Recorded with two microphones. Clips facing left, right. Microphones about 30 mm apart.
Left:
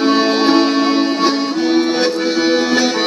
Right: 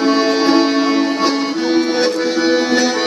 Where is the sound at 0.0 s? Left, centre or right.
Left.